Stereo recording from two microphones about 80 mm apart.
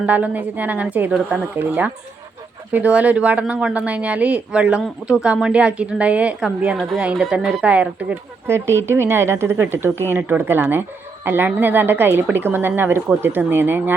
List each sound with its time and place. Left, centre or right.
0.0 s a woman's voice: centre
8.4 s a woman's voice: right